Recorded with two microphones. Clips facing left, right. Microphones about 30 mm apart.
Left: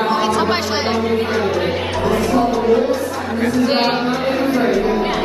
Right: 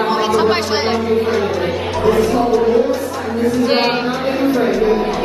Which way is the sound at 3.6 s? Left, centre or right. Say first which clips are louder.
Even; centre.